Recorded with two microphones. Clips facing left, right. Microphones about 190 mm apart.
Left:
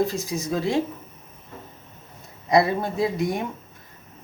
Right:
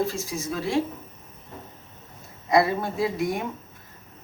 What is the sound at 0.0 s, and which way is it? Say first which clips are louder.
Speech: left 3 dB; 15° left (ahead or behind).